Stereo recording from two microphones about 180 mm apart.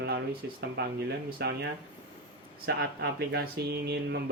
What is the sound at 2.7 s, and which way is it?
Speech, 65° right (ahead or behind).